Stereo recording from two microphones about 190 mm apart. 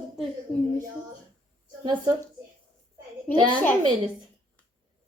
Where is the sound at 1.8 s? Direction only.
25° right (ahead or behind).